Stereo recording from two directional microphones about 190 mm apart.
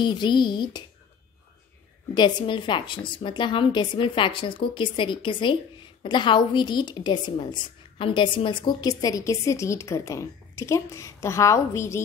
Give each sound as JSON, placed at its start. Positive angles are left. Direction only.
{"t": 0.0, "sound": "a woman's voice", "side_deg": 25}
{"t": 2.1, "sound": "a woman's voice", "side_deg": 25}